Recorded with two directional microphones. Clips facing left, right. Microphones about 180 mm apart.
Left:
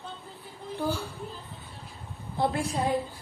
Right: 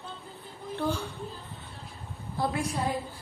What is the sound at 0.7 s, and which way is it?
Speech, 10° left (ahead or behind).